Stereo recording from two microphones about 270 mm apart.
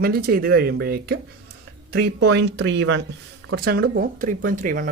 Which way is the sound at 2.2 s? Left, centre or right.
Right.